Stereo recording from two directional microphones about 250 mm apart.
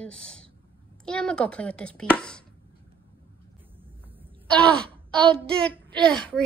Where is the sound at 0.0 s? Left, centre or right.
Centre.